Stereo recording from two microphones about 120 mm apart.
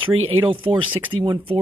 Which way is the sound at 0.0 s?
45° right (ahead or behind).